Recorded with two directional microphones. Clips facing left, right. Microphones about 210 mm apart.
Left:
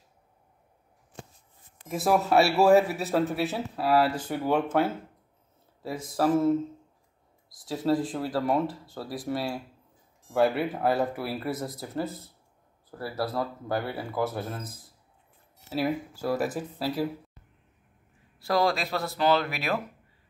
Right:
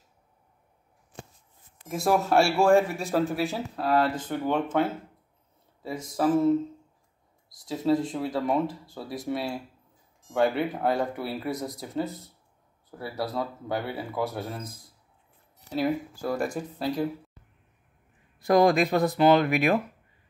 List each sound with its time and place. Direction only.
1.9 s speech: centre (ahead or behind)
5.8 s a sound: 5° left (ahead or behind)
6.1 s speech: 5° left (ahead or behind)
7.6 s speech: 5° left (ahead or behind)
18.4 s speech: 15° right (ahead or behind)